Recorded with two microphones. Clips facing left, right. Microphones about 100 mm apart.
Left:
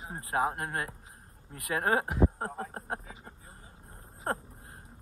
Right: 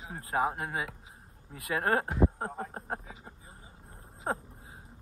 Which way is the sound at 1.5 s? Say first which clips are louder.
Even; centre (ahead or behind).